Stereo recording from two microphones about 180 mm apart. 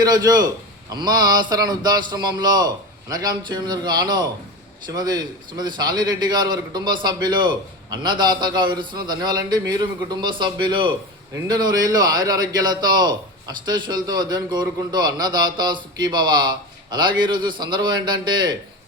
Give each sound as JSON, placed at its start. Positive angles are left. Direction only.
{"t": 0.0, "sound": "a man's voice", "side_deg": -20}